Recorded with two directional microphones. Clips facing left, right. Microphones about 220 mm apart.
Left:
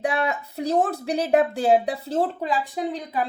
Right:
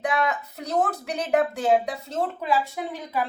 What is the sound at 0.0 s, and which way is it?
Speech, 30° left (ahead or behind).